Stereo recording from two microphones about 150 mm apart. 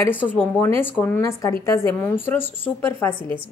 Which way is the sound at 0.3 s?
15° left (ahead or behind).